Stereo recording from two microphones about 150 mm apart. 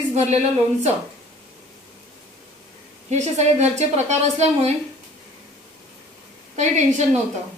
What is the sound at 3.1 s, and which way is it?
A woman's voice, 50° right (ahead or behind).